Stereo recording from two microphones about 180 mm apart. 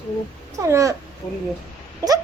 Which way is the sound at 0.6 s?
15° right (ahead or behind).